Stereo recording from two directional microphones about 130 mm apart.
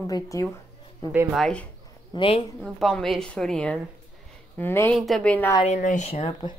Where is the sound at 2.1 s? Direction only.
45° left (ahead or behind).